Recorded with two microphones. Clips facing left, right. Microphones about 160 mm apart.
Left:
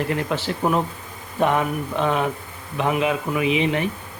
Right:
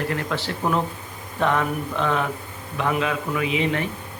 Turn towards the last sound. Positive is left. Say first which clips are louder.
# left 3 dB
turn(degrees=20)  # may be behind; listen again after turning